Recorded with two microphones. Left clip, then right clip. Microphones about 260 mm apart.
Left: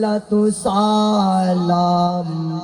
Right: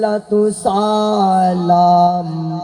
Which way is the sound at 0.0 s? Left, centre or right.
Right.